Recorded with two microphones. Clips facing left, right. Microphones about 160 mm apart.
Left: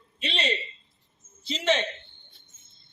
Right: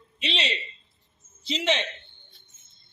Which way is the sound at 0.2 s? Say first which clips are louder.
Left 1 dB; 45° left (ahead or behind).